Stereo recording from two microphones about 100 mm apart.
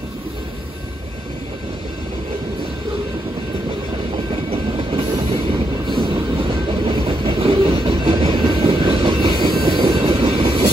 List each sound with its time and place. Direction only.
4.5 s train: 75° right (ahead or behind)
5.9 s train: 50° right (ahead or behind)